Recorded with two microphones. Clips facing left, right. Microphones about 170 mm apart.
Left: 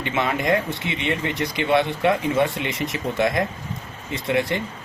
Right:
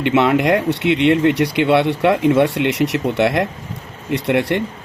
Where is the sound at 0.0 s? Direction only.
70° right (ahead or behind).